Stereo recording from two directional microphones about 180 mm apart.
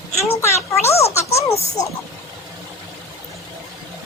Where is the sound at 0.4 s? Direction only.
15° left (ahead or behind).